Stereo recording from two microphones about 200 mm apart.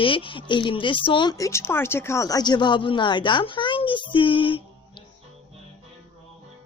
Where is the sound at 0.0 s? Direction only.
25° left (ahead or behind).